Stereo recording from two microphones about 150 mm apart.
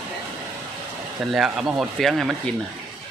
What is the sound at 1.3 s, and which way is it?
Speech, 5° right (ahead or behind).